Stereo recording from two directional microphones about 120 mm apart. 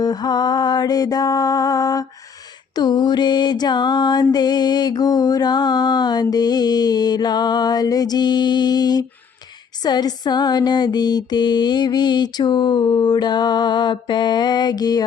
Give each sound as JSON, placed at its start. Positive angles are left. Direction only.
{"t": 0.0, "sound": "mantra", "side_deg": 35}